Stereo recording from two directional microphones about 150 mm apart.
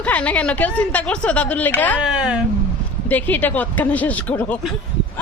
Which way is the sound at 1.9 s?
5° right (ahead or behind).